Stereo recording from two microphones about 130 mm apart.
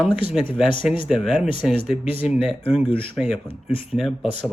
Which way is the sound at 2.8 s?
45° left (ahead or behind).